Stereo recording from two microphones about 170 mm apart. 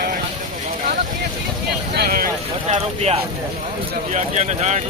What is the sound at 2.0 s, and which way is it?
Boat, 55° right (ahead or behind).